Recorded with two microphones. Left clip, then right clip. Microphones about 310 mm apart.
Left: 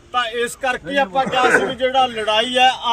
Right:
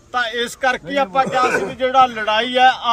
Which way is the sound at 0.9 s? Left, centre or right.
Right.